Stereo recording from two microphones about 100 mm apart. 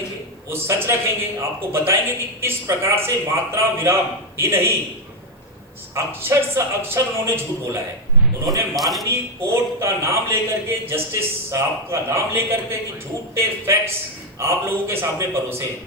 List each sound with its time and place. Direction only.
0.5 s a man's voice: 25° right (ahead or behind)
5.9 s a man's voice: 25° right (ahead or behind)
8.7 s a man's voice: centre (ahead or behind)
9.0 s a man's voice: 25° right (ahead or behind)